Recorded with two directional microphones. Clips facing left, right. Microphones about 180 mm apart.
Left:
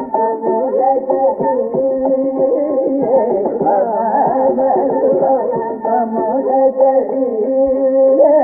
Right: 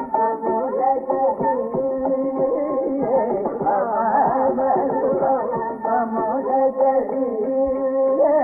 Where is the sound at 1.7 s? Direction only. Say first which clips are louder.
Left 7 dB; 35° left (ahead or behind).